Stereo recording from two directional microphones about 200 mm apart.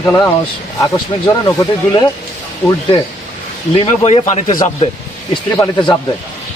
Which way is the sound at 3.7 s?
30° left (ahead or behind).